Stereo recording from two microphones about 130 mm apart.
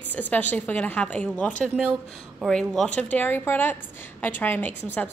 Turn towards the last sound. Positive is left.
turn(degrees=15)  # may be behind; listen again after turning